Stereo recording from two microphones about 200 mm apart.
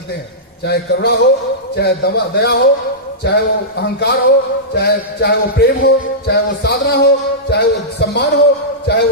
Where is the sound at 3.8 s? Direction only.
55° left (ahead or behind).